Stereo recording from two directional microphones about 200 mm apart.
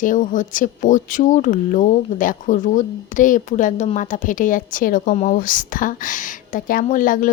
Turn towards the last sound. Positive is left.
turn(degrees=40)  # may be behind; listen again after turning